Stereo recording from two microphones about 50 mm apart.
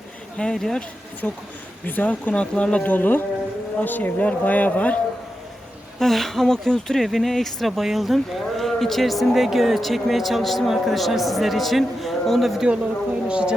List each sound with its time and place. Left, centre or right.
0.3 s speech: centre
1.2 s speech: left
2.4 s speech: left
2.8 s speech: left
6.0 s speech: centre
13.2 s a woman's voice: right